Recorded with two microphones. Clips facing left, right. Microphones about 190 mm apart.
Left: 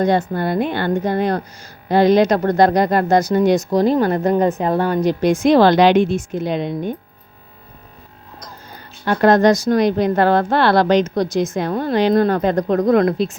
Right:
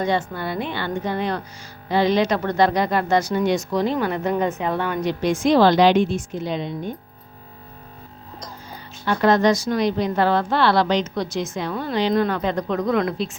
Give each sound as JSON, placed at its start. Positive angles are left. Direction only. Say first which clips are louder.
{"t": 0.0, "sound": "a woman's voice", "louder": "left 6 dB", "side_deg": 40}
{"t": 5.5, "sound": "a woman's voice", "louder": "left 3 dB", "side_deg": 60}
{"t": 9.0, "sound": "a woman's voice", "louder": "left 4 dB", "side_deg": 45}